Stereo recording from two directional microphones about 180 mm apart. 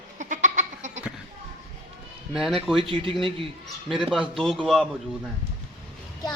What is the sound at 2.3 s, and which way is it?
Speech, centre (ahead or behind).